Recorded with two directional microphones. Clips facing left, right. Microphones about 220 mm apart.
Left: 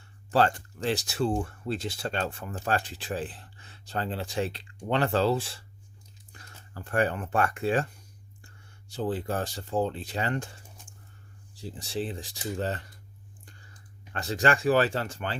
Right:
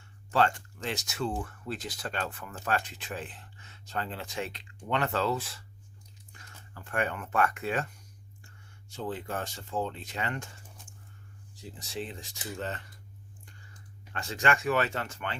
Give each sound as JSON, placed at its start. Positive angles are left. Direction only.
{"t": 0.0, "sound": "speech", "side_deg": 35}
{"t": 11.5, "sound": "speech", "side_deg": 30}
{"t": 14.1, "sound": "speech", "side_deg": 35}